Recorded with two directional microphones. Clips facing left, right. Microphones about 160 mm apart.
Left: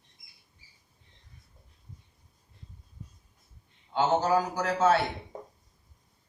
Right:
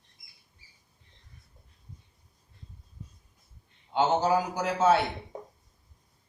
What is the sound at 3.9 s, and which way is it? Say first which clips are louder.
A man's voice: even; 15° right (ahead or behind).